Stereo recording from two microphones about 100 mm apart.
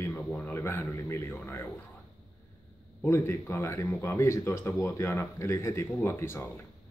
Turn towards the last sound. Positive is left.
turn(degrees=25)  # may be behind; listen again after turning